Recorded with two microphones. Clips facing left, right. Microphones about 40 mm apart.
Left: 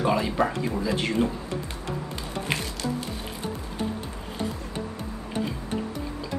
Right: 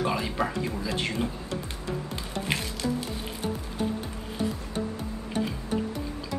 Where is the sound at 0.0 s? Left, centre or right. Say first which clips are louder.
Left 4 dB; centre.